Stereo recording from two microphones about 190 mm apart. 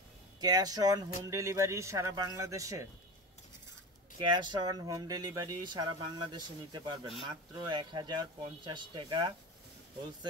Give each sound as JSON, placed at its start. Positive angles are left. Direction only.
{"t": 0.4, "sound": "speech", "side_deg": -20}
{"t": 4.2, "sound": "speech", "side_deg": -25}